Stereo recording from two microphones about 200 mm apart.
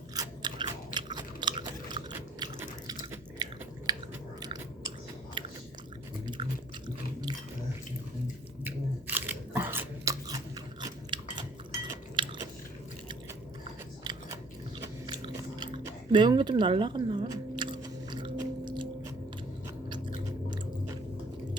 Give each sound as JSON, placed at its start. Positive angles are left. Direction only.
{"t": 0.1, "sound": "biting", "side_deg": -20}
{"t": 0.9, "sound": "chewing", "side_deg": -20}
{"t": 4.4, "sound": "biting", "side_deg": -20}
{"t": 6.2, "sound": "chewing", "side_deg": -25}
{"t": 8.6, "sound": "biting", "side_deg": -10}
{"t": 14.0, "sound": "biting", "side_deg": -20}
{"t": 14.8, "sound": "chewing", "side_deg": -20}